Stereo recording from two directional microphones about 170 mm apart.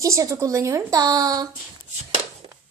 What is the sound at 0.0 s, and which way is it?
A woman's voice, 20° right (ahead or behind).